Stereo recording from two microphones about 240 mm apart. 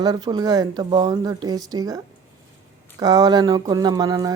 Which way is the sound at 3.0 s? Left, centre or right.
Centre.